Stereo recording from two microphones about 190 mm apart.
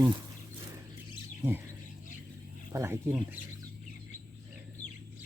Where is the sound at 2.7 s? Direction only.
15° right (ahead or behind).